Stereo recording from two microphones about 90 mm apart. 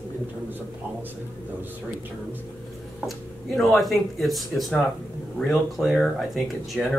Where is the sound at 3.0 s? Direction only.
Centre (ahead or behind).